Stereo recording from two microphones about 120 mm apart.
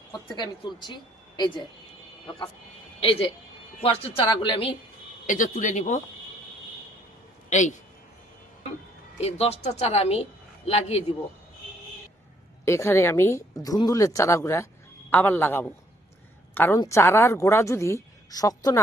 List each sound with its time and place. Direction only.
0.3 s speech: 35° left (ahead or behind)
3.0 s speech: 50° left (ahead or behind)
5.2 s speech: 90° left
7.5 s speech: 90° left
9.2 s a woman's voice: 60° left (ahead or behind)
12.6 s a man's voice: 20° left (ahead or behind)